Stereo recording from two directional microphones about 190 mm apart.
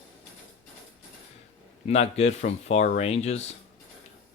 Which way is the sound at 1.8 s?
35° left (ahead or behind).